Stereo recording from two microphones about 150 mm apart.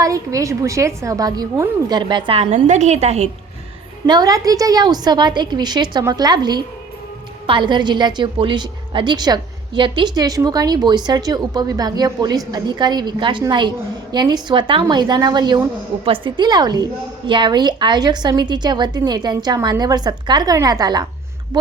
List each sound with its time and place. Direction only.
0.0 s a woman's voice: 20° right (ahead or behind); by 3.2 s 45° right (ahead or behind)
4.0 s a woman's voice: 25° right (ahead or behind)